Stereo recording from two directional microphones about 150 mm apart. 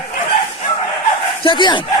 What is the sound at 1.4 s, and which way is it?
Speech, 30° left (ahead or behind).